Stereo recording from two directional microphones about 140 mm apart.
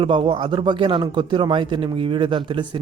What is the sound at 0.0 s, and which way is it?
Speech, 40° right (ahead or behind).